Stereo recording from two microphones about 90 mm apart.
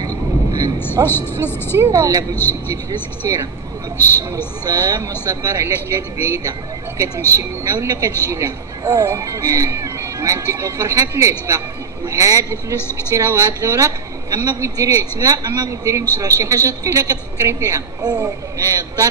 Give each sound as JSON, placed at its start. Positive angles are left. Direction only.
{"t": 0.0, "sound": "vehicle", "side_deg": -45}
{"t": 1.0, "sound": "speech", "side_deg": 25}
{"t": 1.8, "sound": "speech", "side_deg": -40}
{"t": 3.2, "sound": "speech", "side_deg": -40}
{"t": 4.6, "sound": "speech", "side_deg": -45}